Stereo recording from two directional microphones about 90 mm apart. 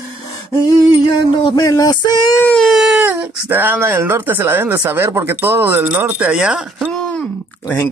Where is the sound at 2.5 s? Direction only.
Centre (ahead or behind).